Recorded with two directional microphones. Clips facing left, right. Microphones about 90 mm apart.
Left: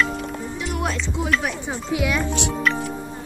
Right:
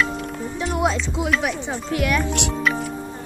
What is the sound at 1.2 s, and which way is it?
Speech, centre (ahead or behind).